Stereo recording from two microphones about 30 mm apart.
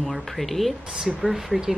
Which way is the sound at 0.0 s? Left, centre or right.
Centre.